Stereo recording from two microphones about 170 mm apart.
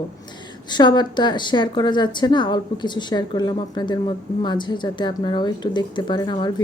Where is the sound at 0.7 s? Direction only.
25° left (ahead or behind).